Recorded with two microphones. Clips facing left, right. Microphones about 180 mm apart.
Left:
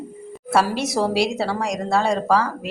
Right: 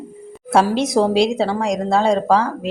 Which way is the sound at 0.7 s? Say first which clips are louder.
Right 5 dB; 5° left (ahead or behind).